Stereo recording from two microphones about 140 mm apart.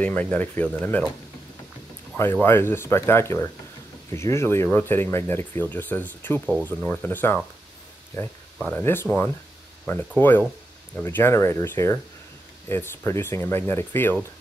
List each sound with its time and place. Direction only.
0.0 s speech: 10° left (ahead or behind)
2.1 s speech: 15° left (ahead or behind)